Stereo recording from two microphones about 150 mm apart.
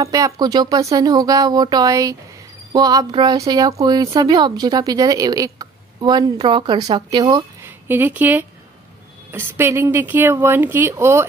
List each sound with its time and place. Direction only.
0.0 s a woman's voice: 25° right (ahead or behind)
7.6 s speech: 15° right (ahead or behind)